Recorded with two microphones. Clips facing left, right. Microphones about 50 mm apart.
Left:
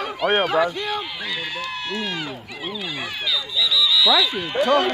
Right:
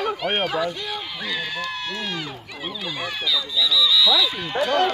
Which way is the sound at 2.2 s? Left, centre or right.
Centre.